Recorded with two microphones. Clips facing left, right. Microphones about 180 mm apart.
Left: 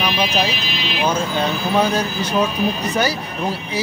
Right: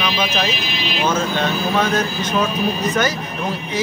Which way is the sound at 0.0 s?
10° left (ahead or behind).